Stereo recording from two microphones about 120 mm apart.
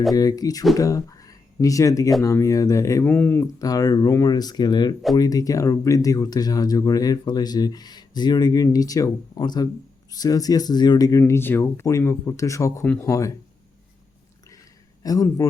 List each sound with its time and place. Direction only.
0.1 s speech: 30° left (ahead or behind)
3.1 s speech: 15° left (ahead or behind)
3.4 s speech: 30° left (ahead or behind)
15.0 s speech: 30° left (ahead or behind)